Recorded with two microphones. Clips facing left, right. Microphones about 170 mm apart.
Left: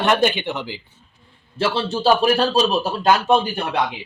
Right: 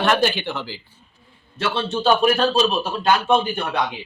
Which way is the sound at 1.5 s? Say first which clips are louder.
Left 2 dB; 30° left (ahead or behind).